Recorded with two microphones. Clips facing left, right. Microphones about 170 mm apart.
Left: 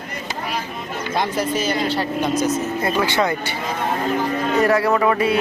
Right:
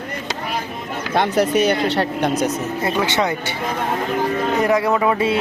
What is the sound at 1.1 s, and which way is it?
Speech, 65° right (ahead or behind).